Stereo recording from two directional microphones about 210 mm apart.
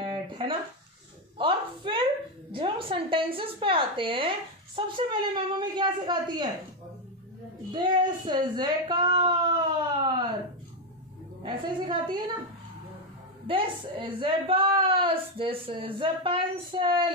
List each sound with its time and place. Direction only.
0.0 s a sound: 20° right (ahead or behind)
1.4 s a woman's voice: 20° right (ahead or behind)
7.7 s a woman's voice: 20° right (ahead or behind)
11.4 s a woman's voice: 20° right (ahead or behind)
13.5 s a woman's voice: 25° right (ahead or behind)